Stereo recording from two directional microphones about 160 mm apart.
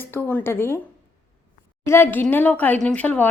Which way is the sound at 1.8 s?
15° left (ahead or behind).